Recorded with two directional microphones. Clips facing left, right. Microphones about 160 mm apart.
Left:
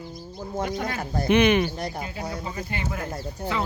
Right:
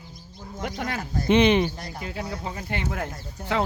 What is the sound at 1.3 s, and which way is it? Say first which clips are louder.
Speech: right 1 dB; 25° right (ahead or behind).